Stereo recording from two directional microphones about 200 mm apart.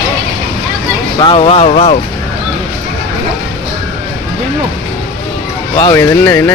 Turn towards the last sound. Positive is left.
turn(degrees=15)  # may be behind; listen again after turning